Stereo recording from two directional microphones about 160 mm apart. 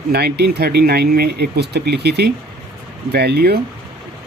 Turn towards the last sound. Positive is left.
turn(degrees=-85)